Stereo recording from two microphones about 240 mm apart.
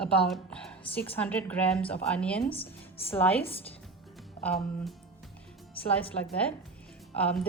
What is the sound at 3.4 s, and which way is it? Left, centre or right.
Speech, left.